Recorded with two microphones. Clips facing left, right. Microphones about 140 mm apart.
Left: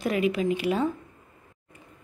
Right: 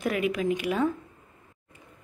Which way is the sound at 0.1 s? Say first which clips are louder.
Left 3 dB; centre (ahead or behind).